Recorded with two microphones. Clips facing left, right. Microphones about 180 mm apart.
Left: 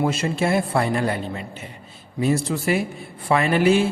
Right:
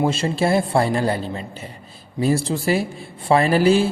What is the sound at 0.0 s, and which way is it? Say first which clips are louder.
A man's voice: right 2 dB; 30° right (ahead or behind).